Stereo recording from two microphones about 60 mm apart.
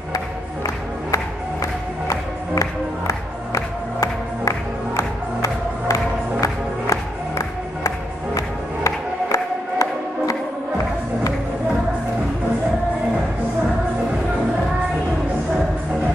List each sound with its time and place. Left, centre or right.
1.1 s music: left